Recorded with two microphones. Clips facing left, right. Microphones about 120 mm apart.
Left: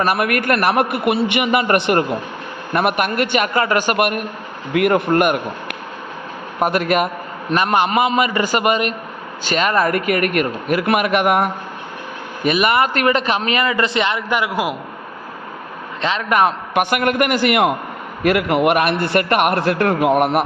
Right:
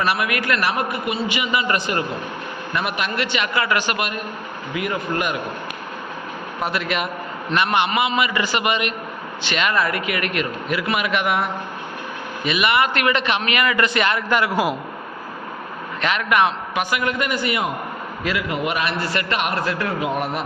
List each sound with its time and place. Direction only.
0.0 s a man's voice: 50° left (ahead or behind)
6.6 s a man's voice: 50° left (ahead or behind); by 14.8 s 10° left (ahead or behind)
16.0 s a man's voice: 30° left (ahead or behind)
16.8 s a man's voice: 60° left (ahead or behind)